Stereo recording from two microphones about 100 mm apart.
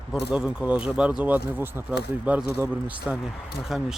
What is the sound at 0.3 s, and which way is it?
Speech, 15° right (ahead or behind).